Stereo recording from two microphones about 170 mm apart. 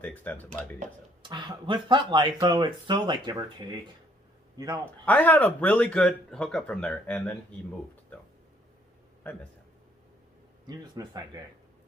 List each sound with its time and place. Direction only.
0.0 s speech: 10° left (ahead or behind)
1.2 s a man's voice: 25° right (ahead or behind)
5.0 s speech: 10° left (ahead or behind)
9.2 s speech: 10° left (ahead or behind)
10.7 s speech: 20° right (ahead or behind)